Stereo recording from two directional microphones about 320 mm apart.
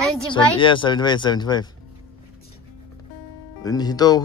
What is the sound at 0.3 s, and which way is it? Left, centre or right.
Speech, centre.